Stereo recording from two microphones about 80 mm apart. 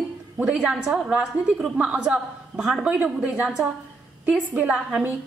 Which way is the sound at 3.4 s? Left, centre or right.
Centre.